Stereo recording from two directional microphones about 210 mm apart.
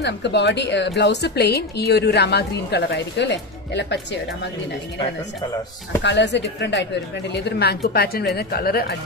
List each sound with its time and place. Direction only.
0.0 s a woman's voice: 55° left (ahead or behind)
6.0 s a woman's voice: 55° left (ahead or behind)